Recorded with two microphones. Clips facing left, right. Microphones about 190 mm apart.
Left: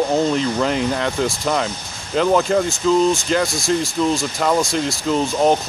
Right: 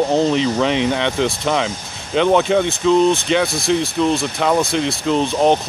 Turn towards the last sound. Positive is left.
turn(degrees=0)  # may be behind; listen again after turning